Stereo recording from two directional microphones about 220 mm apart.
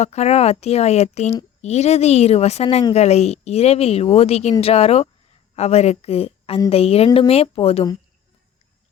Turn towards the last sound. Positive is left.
turn(degrees=25)  # may be behind; listen again after turning